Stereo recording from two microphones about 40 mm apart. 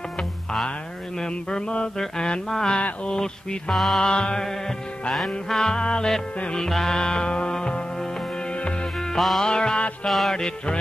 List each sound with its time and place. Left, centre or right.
1.2 s music: left
3.7 s music: centre
4.0 s music: left
5.1 s music: centre
5.6 s music: left
9.1 s music: centre
9.4 s music: centre
10.0 s music: centre
10.3 s music: centre